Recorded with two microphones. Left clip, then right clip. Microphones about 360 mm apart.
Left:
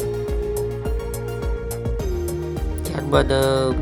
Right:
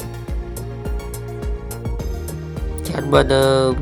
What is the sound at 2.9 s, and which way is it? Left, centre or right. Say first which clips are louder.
Music: right 4 dB; left.